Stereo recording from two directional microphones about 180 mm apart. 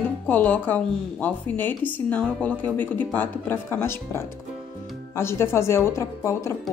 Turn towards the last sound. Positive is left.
turn(degrees=15)  # may be behind; listen again after turning